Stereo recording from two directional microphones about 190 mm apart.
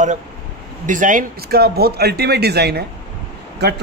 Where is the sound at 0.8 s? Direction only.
45° right (ahead or behind).